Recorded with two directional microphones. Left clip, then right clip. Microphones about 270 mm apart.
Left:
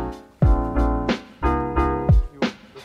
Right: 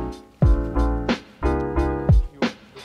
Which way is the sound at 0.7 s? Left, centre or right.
Centre.